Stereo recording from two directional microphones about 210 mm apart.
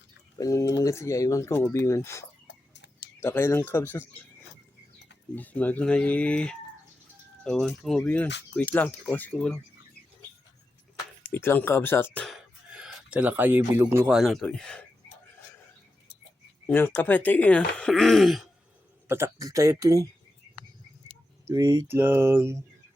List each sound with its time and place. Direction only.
0.3 s speech: 15° left (ahead or behind)
2.7 s a sound: 55° left (ahead or behind)
3.2 s speech: 10° left (ahead or behind)
5.3 s speech: 10° left (ahead or behind)
11.3 s speech: 10° left (ahead or behind)
16.6 s speech: 10° left (ahead or behind)
19.0 s speech: 10° right (ahead or behind)
21.5 s speech: 15° right (ahead or behind)